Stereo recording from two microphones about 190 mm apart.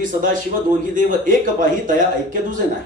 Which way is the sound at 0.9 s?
45° right (ahead or behind).